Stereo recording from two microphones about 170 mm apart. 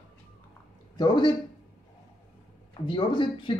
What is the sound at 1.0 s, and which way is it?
Speech, 25° left (ahead or behind).